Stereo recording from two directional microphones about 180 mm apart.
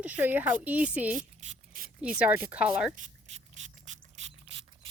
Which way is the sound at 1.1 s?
45° right (ahead or behind).